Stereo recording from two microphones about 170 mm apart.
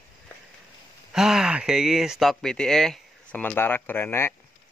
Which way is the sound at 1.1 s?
5° right (ahead or behind).